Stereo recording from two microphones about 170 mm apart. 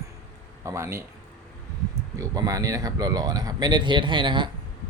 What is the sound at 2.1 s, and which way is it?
Speech, 20° right (ahead or behind).